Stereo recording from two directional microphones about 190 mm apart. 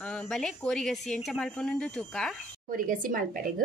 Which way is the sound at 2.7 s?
45° right (ahead or behind).